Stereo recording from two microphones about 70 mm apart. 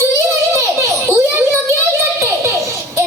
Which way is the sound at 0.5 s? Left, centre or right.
Right.